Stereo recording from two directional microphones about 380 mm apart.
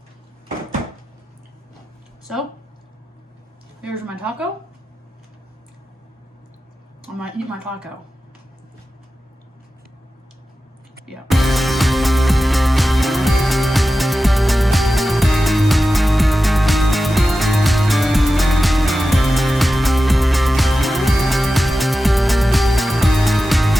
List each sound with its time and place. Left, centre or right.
3.8 s a woman's voice: centre
11.0 s music: centre